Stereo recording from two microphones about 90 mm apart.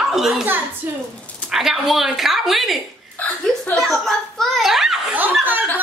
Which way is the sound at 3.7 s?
5° left (ahead or behind).